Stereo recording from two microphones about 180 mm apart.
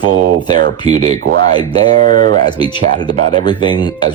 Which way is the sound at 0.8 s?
35° right (ahead or behind).